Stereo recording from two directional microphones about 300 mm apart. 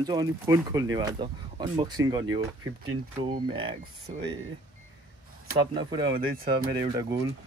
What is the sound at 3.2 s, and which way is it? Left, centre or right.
Speech, centre.